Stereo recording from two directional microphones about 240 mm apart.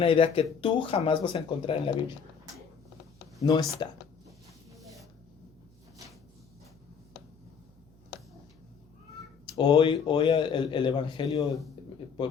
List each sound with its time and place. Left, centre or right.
0.0 s a man's voice: left
3.4 s speech: centre
9.6 s a man's voice: centre